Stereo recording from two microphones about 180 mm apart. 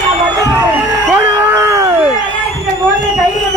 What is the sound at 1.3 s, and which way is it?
Cat, 15° right (ahead or behind).